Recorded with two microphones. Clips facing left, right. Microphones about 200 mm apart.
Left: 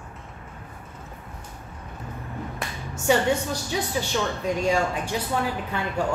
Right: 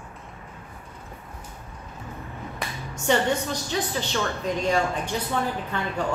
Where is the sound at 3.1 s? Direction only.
5° left (ahead or behind).